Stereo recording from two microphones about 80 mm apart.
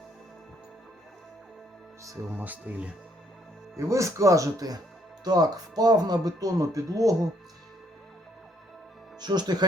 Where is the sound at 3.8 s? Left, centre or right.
Right.